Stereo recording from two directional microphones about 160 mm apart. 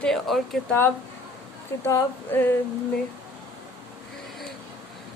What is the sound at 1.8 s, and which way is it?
Female singing, 15° left (ahead or behind).